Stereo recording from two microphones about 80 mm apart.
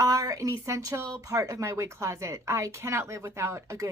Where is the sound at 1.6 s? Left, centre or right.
Right.